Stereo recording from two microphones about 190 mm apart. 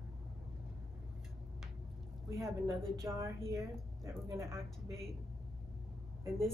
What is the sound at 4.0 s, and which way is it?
Speech, 15° right (ahead or behind).